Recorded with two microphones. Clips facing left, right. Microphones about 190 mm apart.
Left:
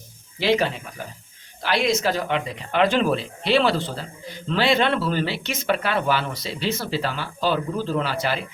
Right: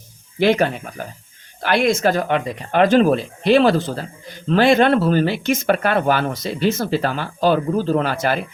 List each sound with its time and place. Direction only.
0.3 s speech: 55° right (ahead or behind)